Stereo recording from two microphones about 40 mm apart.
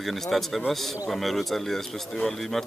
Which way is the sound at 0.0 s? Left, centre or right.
Centre.